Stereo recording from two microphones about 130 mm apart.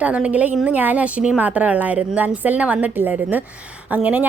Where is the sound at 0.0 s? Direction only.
10° right (ahead or behind).